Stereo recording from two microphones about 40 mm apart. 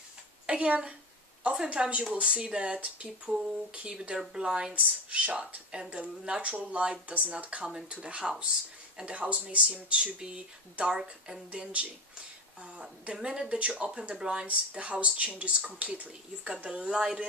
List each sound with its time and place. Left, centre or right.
0.5 s speech: right
4.3 s speech: centre
4.7 s speech: right
9.9 s speech: right
13.1 s speech: centre
14.4 s speech: right
16.9 s speech: centre